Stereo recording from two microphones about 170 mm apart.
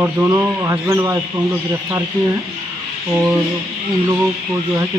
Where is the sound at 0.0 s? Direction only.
15° right (ahead or behind).